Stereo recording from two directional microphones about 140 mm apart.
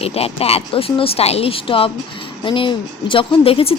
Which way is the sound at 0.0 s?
45° left (ahead or behind).